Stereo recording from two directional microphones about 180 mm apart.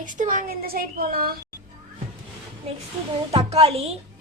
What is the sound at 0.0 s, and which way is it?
A woman's voice, 45° right (ahead or behind).